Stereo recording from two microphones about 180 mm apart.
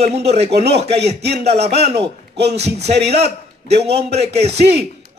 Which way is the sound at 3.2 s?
35° right (ahead or behind).